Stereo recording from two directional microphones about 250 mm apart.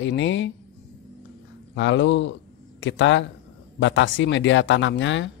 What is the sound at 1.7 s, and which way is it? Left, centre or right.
Speech, left.